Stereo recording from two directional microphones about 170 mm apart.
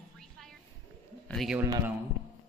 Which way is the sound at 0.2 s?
Centre (ahead or behind).